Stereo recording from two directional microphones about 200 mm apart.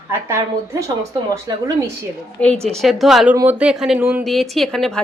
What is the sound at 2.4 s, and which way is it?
A woman's voice, 5° left (ahead or behind).